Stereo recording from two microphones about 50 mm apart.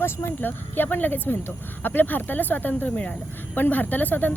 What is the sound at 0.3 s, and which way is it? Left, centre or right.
Speech, left.